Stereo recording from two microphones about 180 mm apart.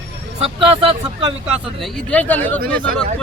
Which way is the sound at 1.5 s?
Centre (ahead or behind).